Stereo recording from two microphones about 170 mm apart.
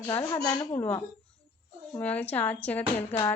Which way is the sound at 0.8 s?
15° left (ahead or behind).